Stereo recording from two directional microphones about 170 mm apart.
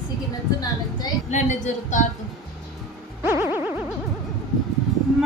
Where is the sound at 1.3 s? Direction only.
45° left (ahead or behind).